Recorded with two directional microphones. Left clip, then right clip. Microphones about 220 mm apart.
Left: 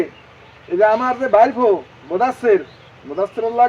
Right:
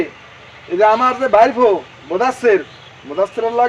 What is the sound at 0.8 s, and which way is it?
A man's voice, 20° right (ahead or behind).